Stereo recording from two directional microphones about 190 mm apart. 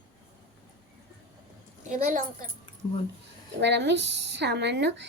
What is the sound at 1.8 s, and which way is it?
Speech, 45° right (ahead or behind).